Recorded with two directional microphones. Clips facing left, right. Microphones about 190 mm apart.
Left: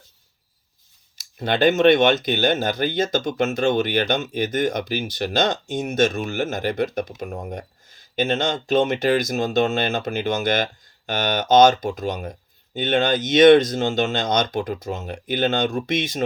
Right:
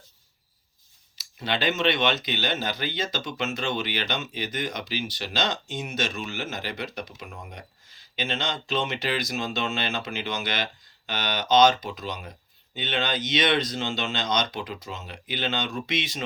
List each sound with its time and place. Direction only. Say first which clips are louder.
1.1 s speech: left 6 dB; 50° left (ahead or behind)